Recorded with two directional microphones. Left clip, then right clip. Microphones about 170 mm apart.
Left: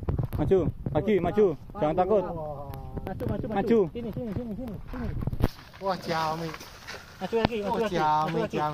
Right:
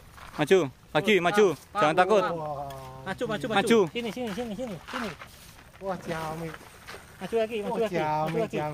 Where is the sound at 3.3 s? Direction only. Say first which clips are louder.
Right 2 dB; 5° right (ahead or behind).